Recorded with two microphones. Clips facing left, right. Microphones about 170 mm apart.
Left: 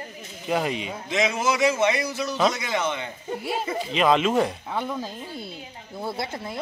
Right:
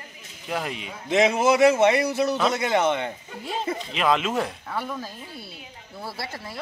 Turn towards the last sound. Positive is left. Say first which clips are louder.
# left 4 dB
turn(degrees=20)  # may be behind; listen again after turning